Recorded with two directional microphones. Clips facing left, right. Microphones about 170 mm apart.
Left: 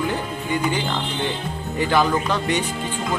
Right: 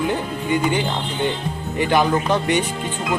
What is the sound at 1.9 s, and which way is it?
Speech, 15° right (ahead or behind).